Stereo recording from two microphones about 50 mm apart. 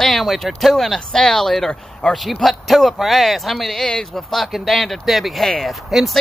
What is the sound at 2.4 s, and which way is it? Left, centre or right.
Speech, centre.